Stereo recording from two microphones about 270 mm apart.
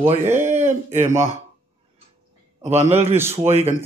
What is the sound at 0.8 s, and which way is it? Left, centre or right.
Speech, right.